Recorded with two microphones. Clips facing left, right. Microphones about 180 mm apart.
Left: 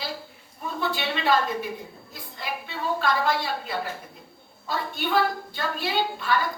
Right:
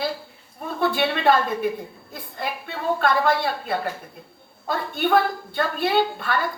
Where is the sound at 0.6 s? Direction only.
55° right (ahead or behind).